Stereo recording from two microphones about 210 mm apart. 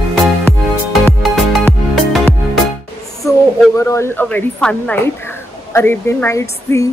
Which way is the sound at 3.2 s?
15° left (ahead or behind).